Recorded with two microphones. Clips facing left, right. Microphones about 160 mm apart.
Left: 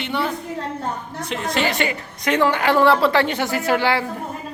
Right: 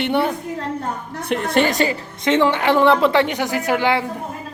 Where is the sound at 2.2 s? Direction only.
25° right (ahead or behind).